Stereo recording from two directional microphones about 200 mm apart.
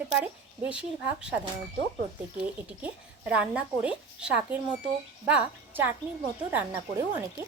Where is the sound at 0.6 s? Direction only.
5° right (ahead or behind).